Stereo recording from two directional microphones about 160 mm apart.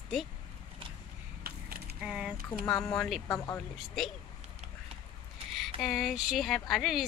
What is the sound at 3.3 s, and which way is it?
Speech, 15° left (ahead or behind).